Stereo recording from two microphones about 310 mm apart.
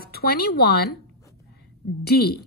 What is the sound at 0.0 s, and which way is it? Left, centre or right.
Speech, left.